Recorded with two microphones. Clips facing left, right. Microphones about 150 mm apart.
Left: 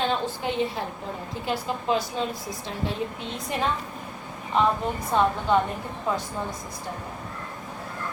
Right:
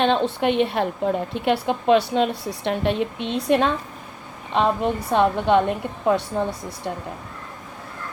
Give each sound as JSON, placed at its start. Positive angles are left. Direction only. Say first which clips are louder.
{"t": 0.0, "sound": "a woman's voice", "louder": "right 7 dB", "side_deg": -70}